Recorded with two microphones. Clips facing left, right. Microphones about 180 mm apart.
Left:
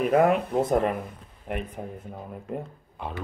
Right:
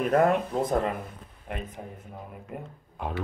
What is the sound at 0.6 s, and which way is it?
Speech, 20° left (ahead or behind).